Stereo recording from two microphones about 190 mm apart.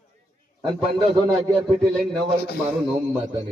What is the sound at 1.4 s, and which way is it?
Speech, 5° right (ahead or behind).